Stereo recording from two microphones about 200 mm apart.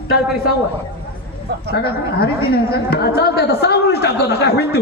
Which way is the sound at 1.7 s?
50° left (ahead or behind).